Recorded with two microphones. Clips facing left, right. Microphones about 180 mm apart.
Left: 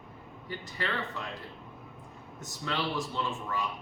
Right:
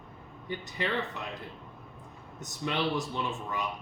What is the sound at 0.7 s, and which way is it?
Speech, 20° right (ahead or behind).